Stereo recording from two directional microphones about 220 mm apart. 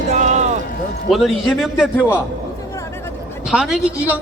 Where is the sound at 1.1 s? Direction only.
Centre (ahead or behind).